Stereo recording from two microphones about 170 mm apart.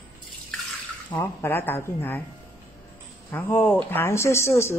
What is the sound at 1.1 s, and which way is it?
A woman's voice, 10° left (ahead or behind).